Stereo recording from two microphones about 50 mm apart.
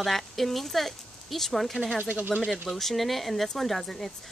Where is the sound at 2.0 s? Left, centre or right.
Right.